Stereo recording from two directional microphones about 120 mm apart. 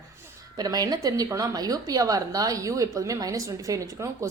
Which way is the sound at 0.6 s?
30° right (ahead or behind).